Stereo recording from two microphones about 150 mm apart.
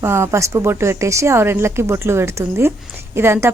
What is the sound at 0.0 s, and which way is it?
Speech, 15° right (ahead or behind).